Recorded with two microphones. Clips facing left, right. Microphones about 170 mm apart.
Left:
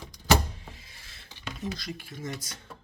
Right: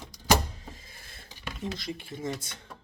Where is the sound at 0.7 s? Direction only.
45° right (ahead or behind).